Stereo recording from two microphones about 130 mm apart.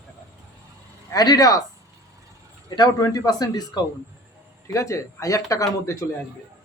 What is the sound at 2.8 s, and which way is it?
A man's voice, 25° left (ahead or behind).